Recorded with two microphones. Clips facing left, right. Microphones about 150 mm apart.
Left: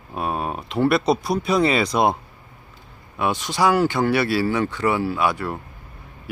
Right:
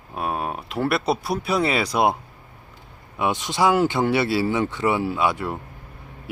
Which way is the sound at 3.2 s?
20° right (ahead or behind).